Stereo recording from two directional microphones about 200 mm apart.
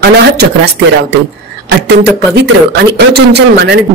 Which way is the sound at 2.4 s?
55° right (ahead or behind).